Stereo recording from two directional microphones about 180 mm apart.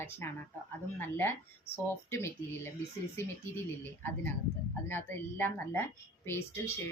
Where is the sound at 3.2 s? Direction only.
15° left (ahead or behind).